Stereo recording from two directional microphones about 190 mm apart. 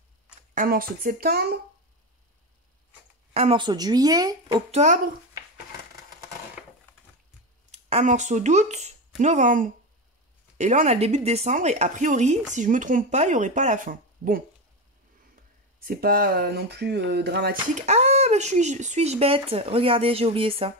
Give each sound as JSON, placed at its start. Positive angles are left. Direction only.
{"t": 0.6, "sound": "speech", "side_deg": -50}
{"t": 3.3, "sound": "speech", "side_deg": -30}
{"t": 4.6, "sound": "speech", "side_deg": -35}
{"t": 7.7, "sound": "speech", "side_deg": -35}
{"t": 15.8, "sound": "speech", "side_deg": -50}
{"t": 17.6, "sound": "speech", "side_deg": -40}